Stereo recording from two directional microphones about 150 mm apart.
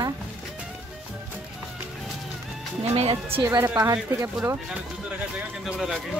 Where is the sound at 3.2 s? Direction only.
15° right (ahead or behind).